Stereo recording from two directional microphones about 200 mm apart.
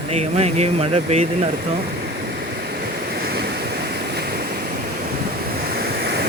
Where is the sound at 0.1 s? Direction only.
30° right (ahead or behind).